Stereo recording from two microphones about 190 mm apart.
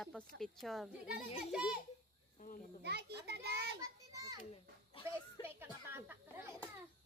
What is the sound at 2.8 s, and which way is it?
Speech, 60° right (ahead or behind).